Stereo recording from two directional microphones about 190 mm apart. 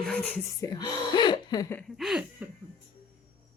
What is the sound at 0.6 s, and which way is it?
Speech, 20° left (ahead or behind).